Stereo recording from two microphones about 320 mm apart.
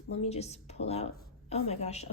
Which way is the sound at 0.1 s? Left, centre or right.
Centre.